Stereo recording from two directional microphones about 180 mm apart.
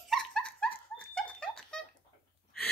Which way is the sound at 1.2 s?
5° left (ahead or behind).